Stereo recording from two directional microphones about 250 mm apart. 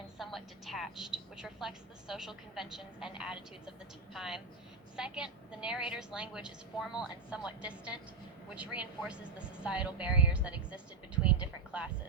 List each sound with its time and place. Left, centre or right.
0.2 s speech: centre